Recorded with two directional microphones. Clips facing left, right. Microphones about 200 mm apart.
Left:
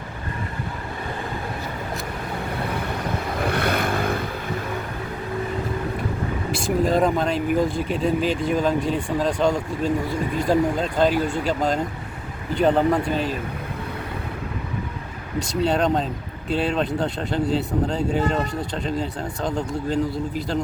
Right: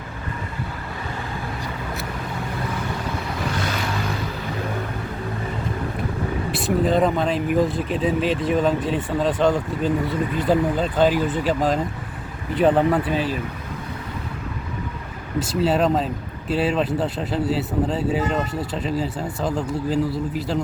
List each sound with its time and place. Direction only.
3.5 s vehicle: 60° left (ahead or behind)
6.5 s speech: centre (ahead or behind)
15.4 s speech: 5° right (ahead or behind)